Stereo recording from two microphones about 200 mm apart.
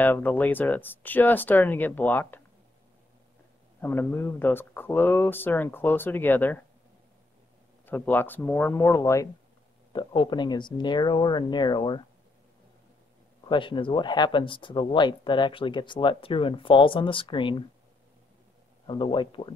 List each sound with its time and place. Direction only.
0.0 s speech: 10° left (ahead or behind)
3.8 s speech: 10° left (ahead or behind)
7.8 s speech: 10° left (ahead or behind)
13.5 s speech: 25° left (ahead or behind)
18.9 s speech: 25° left (ahead or behind)